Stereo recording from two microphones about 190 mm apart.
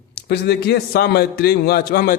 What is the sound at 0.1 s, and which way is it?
A man's voice, 60° left (ahead or behind).